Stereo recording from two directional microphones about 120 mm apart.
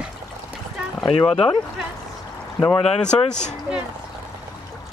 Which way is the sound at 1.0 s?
45° left (ahead or behind).